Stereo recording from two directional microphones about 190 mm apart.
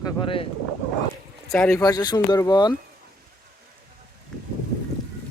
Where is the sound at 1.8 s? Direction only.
20° left (ahead or behind).